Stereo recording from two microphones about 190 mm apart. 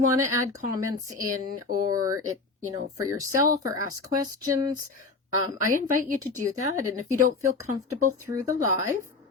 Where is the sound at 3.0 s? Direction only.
15° right (ahead or behind).